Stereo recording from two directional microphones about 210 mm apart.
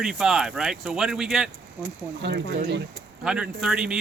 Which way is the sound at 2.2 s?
60° right (ahead or behind).